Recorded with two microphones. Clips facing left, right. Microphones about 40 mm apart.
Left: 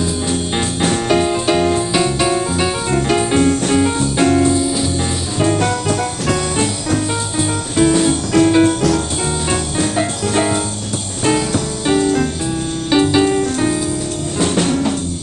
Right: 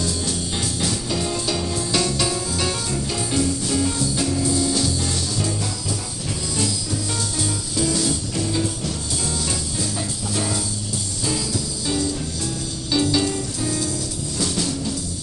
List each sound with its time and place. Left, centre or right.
0.0 s music: left
1.9 s music: left
4.6 s music: left
5.4 s music: left
8.3 s music: left